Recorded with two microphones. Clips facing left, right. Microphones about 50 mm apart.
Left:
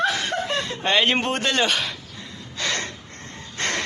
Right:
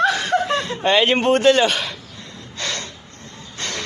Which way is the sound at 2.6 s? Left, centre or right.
Centre.